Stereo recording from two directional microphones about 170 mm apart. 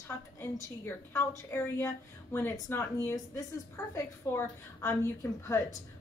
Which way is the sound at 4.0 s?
15° left (ahead or behind).